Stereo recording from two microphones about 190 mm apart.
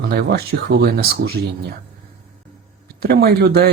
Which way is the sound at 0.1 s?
55° right (ahead or behind).